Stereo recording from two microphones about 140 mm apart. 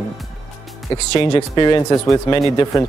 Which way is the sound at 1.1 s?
35° left (ahead or behind).